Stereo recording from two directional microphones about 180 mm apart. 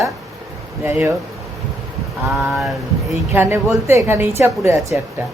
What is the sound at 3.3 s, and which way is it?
Speech, 10° right (ahead or behind).